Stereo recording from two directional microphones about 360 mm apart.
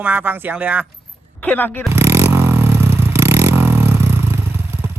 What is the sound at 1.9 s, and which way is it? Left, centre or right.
Vehicle, centre.